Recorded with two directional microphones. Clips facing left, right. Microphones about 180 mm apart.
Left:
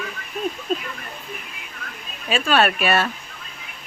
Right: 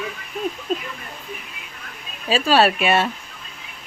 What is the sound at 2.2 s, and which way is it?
Speech, 30° right (ahead or behind).